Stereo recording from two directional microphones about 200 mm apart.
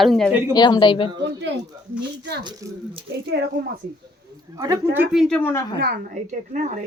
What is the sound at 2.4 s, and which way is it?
Speech, 20° right (ahead or behind).